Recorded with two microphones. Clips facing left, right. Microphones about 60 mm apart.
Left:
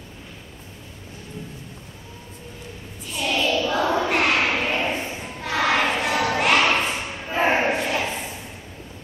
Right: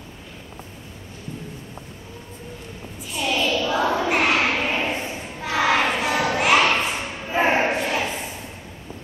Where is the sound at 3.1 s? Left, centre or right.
Centre.